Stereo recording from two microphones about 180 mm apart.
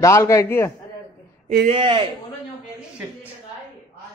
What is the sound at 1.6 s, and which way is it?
Speech, 30° right (ahead or behind).